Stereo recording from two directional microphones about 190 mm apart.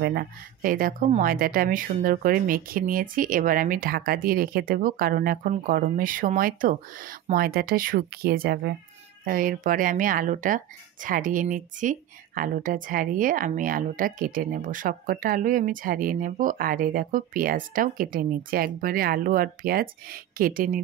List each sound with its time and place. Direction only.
0.0 s speech: 55° right (ahead or behind)